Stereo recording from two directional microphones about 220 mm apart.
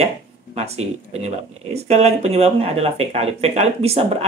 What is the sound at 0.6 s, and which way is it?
Speech, 30° right (ahead or behind).